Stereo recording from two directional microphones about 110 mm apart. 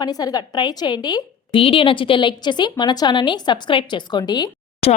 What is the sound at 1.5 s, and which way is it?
A woman's voice, 55° left (ahead or behind).